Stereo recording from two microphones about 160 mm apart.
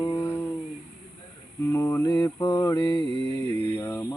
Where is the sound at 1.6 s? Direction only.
15° left (ahead or behind).